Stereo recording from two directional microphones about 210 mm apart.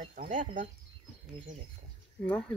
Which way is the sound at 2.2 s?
5° left (ahead or behind).